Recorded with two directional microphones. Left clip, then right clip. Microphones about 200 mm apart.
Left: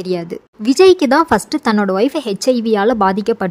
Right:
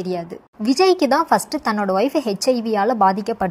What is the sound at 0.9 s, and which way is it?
A woman's voice, 20° left (ahead or behind).